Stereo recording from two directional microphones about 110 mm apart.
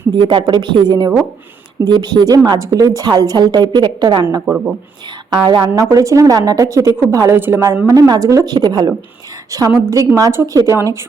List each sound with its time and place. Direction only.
0.2 s a woman's voice: 45° right (ahead or behind)
4.4 s speech: 15° right (ahead or behind)
5.3 s speech: 45° right (ahead or behind)
5.7 s a woman's voice: 30° right (ahead or behind)